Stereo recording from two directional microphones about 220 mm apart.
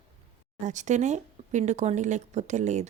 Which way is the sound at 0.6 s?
35° right (ahead or behind).